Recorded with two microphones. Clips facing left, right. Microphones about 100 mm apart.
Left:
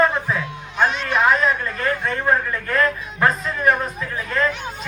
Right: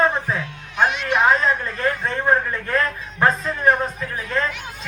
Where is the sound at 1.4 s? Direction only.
25° right (ahead or behind).